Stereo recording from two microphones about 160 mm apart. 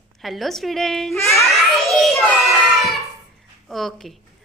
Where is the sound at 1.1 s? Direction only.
15° left (ahead or behind).